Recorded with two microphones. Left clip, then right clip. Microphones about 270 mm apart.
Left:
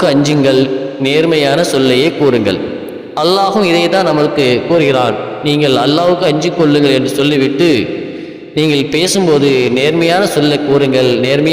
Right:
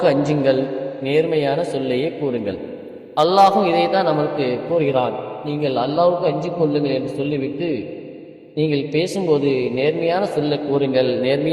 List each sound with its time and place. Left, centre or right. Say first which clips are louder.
0.0 s a man's voice: left 6 dB; left
3.2 s a man's voice: left 2 dB; left